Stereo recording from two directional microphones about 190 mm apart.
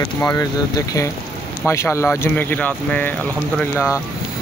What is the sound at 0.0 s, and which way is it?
Speech, 15° left (ahead or behind).